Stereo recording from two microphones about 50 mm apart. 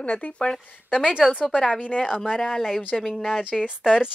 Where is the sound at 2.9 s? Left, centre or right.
Centre.